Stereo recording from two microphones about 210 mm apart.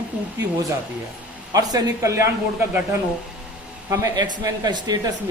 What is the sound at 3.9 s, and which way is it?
Speech, 15° right (ahead or behind).